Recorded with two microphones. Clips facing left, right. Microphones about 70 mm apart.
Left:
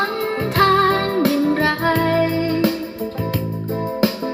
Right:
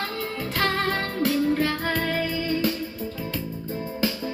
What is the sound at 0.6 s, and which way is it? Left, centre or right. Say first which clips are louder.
Music: left 10 dB; left.